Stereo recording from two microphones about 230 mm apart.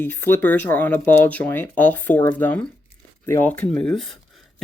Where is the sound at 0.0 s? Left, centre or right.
Centre.